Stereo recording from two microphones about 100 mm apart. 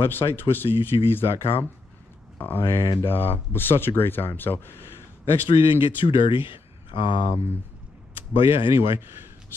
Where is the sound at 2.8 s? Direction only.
55° left (ahead or behind).